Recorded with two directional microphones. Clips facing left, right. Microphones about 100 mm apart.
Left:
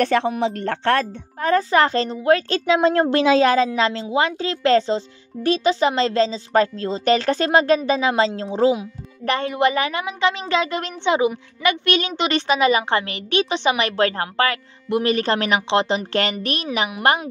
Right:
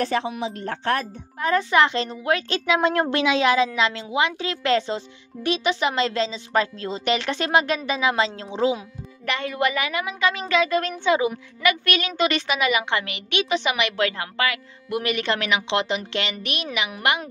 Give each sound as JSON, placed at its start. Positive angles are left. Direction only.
{"t": 0.0, "sound": "speech", "side_deg": 65}
{"t": 1.4, "sound": "a woman's voice", "side_deg": 35}